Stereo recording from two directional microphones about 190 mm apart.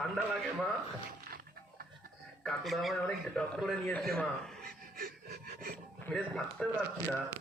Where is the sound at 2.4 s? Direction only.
Centre (ahead or behind).